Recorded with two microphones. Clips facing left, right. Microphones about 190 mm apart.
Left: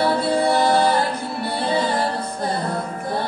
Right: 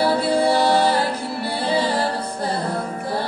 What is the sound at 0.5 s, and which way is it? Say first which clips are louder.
Music: left 1 dB; 30° right (ahead or behind).